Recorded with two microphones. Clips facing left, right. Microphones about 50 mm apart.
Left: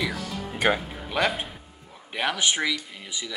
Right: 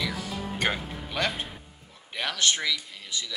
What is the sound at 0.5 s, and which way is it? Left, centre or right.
A man's voice, centre.